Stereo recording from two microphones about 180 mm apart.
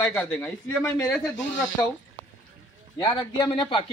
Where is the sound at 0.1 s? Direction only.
10° left (ahead or behind).